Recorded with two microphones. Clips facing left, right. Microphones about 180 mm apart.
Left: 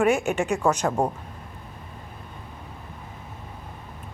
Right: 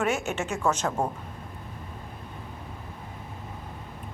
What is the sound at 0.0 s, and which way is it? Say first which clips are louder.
A woman's voice: left 6 dB; 15° left (ahead or behind).